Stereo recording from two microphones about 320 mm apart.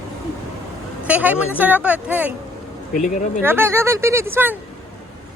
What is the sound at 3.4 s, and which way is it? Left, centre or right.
Speech, centre.